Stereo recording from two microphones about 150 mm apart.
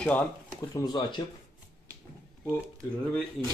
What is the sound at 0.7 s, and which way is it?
Speech, 30° left (ahead or behind).